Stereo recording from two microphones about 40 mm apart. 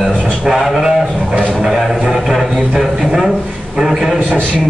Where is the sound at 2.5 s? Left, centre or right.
Centre.